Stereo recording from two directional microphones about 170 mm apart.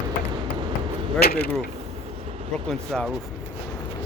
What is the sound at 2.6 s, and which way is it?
Speech, 5° left (ahead or behind).